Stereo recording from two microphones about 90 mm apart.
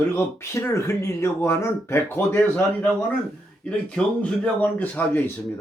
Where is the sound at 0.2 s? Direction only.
30° left (ahead or behind).